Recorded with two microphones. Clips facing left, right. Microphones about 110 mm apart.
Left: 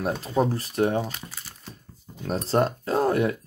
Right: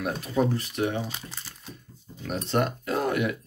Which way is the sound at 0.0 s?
30° left (ahead or behind).